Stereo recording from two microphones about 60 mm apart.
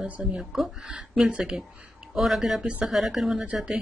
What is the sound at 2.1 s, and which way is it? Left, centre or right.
Speech, centre.